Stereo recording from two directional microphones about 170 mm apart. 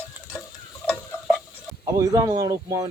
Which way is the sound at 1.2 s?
Centre (ahead or behind).